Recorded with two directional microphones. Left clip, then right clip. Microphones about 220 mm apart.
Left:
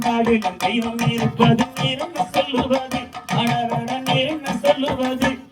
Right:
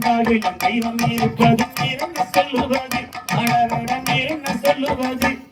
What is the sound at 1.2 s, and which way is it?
Music, 20° left (ahead or behind).